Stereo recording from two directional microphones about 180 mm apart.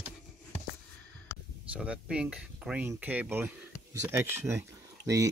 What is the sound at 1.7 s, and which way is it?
Speech, 5° right (ahead or behind).